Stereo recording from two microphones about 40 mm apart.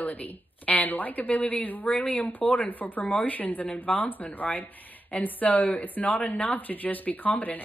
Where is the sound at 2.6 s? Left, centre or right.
Left.